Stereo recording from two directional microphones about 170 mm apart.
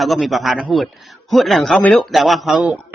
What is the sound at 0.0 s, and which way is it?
Speech, centre (ahead or behind).